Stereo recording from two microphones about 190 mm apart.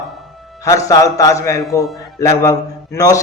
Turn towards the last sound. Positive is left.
turn(degrees=15)  # may be behind; listen again after turning